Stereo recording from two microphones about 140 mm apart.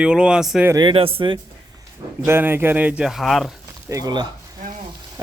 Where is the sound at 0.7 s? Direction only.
30° right (ahead or behind).